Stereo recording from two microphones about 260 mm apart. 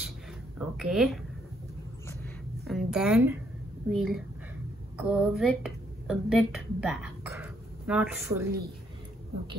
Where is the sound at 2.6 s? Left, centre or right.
Centre.